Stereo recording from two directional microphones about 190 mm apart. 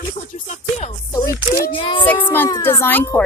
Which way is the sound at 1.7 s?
25° left (ahead or behind).